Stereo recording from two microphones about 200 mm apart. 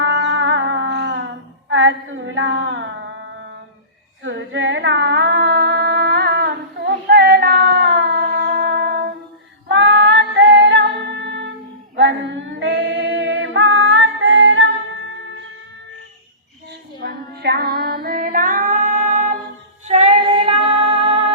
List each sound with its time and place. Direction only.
0.0 s music: 70° right (ahead or behind)
1.7 s a sound: 70° right (ahead or behind)
4.2 s singing: 65° right (ahead or behind)
9.6 s music: 60° right (ahead or behind)
11.9 s female singing: 65° right (ahead or behind)
17.0 s female singing: 50° right (ahead or behind); by 21.3 s 30° right (ahead or behind)